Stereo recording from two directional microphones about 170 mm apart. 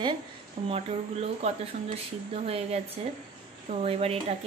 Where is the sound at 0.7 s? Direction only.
35° right (ahead or behind).